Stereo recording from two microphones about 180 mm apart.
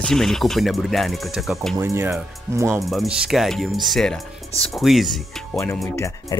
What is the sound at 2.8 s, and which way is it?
Speech, centre (ahead or behind).